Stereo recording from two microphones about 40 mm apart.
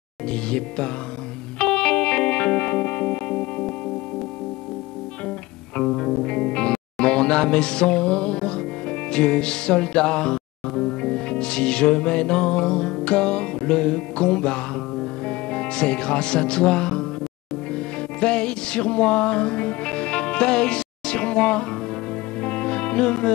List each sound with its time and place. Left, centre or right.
0.3 s speech: left
1.6 s music: left
5.8 s speech: centre
17.7 s music: left